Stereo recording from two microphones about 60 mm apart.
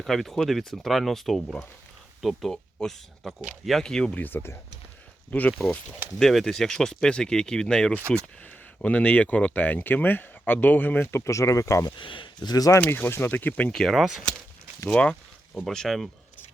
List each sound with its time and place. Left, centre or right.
0.0 s speech: centre
4.1 s speech: left
5.3 s speech: left
6.1 s speech: centre
8.4 s speech: left
11.2 s speech: left
12.5 s speech: left
13.1 s speech: left
13.7 s speech: centre
15.6 s speech: centre